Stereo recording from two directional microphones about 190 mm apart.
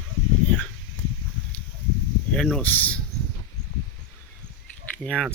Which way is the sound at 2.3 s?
5° left (ahead or behind).